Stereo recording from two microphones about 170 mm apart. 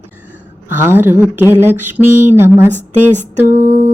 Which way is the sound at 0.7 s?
10° right (ahead or behind).